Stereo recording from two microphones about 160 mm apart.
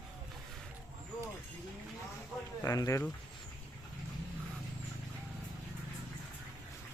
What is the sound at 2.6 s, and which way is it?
Speech, 20° left (ahead or behind).